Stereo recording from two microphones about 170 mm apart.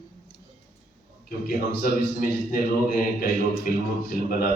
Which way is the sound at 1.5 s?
55° left (ahead or behind).